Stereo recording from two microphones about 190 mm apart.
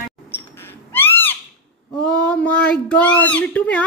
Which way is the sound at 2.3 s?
5° left (ahead or behind).